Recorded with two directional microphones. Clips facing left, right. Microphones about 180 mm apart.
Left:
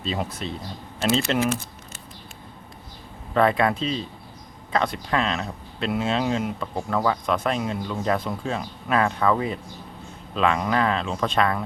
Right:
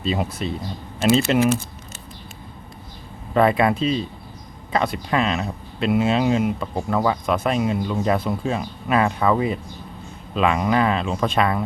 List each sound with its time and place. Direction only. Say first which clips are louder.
0.0 s speech: right 4 dB; 10° right (ahead or behind)
1.5 s typing: right 5 dB; 25° right (ahead or behind)
3.3 s speech: right 3 dB; 10° right (ahead or behind)